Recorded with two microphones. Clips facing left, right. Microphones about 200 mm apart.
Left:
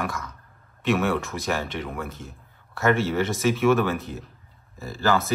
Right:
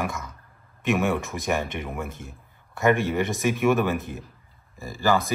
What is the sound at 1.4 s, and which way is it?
Speech, 15° right (ahead or behind).